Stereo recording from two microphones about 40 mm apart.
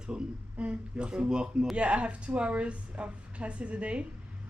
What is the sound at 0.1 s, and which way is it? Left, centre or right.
A woman's voice, right.